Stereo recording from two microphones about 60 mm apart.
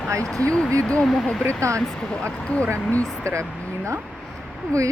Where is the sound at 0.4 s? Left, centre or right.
Centre.